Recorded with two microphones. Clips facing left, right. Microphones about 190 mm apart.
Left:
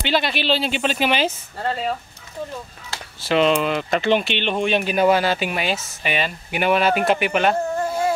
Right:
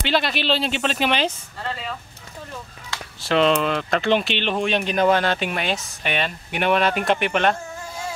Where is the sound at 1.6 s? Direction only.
40° left (ahead or behind).